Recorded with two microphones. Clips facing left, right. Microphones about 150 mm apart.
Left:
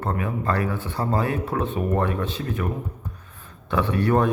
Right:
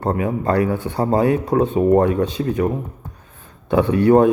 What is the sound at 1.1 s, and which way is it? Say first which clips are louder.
Speech: right 8 dB; 25° right (ahead or behind).